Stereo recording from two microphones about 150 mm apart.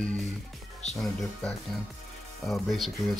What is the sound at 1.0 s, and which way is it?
Speech, centre (ahead or behind).